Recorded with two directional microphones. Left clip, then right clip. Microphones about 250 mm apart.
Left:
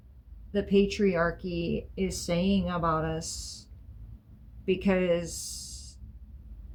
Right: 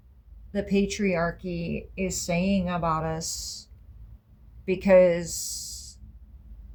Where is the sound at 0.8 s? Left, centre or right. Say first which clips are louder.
Even; right.